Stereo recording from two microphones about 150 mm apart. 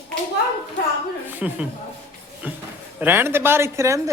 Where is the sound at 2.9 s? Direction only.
15° right (ahead or behind).